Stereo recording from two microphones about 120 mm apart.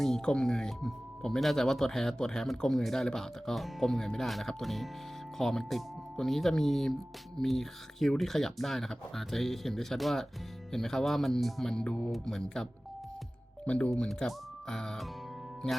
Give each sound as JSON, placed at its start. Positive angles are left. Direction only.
{"t": 0.0, "sound": "speech", "side_deg": 5}
{"t": 13.7, "sound": "speech", "side_deg": 10}